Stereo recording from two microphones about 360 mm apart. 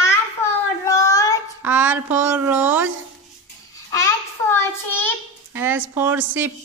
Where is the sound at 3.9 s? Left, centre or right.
Centre.